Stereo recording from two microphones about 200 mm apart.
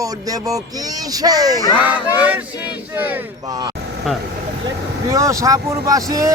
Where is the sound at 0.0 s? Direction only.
15° right (ahead or behind).